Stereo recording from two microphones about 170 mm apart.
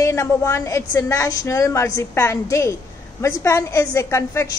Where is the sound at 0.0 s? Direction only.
15° left (ahead or behind).